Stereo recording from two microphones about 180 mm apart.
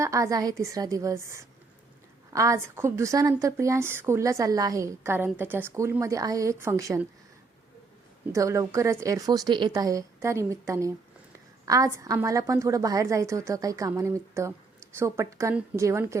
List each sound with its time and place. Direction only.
0.0 s a woman's voice: 15° right (ahead or behind)
8.3 s a woman's voice: 15° right (ahead or behind)